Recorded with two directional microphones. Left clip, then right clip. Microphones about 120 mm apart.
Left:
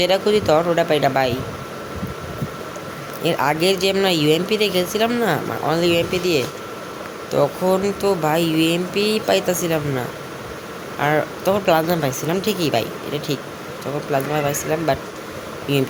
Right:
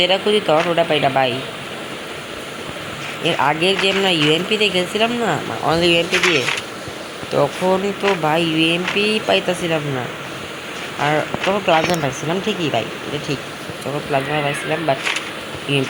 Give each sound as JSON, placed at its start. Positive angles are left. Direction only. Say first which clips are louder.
{"t": 0.0, "sound": "speech", "louder": "right 1 dB", "side_deg": 25}
{"t": 3.2, "sound": "speech", "louder": "right 1 dB", "side_deg": 20}
{"t": 5.6, "sound": "speech", "louder": "right 3 dB", "side_deg": 5}
{"t": 7.3, "sound": "speech", "louder": "right 1 dB", "side_deg": 5}
{"t": 11.0, "sound": "speech", "louder": "right 1 dB", "side_deg": 25}
{"t": 14.1, "sound": "speech", "louder": "right 1 dB", "side_deg": 20}